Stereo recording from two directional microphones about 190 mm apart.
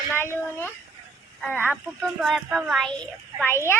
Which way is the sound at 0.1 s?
10° left (ahead or behind).